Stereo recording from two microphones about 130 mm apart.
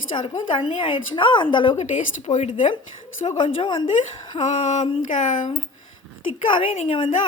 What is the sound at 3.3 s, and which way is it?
Speech, 40° left (ahead or behind).